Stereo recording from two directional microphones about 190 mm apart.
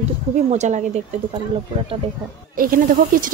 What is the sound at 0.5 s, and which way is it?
Speech, 40° right (ahead or behind).